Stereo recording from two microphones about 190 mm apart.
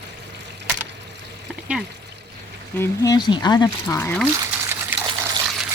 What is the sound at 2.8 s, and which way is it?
Speech, 20° left (ahead or behind).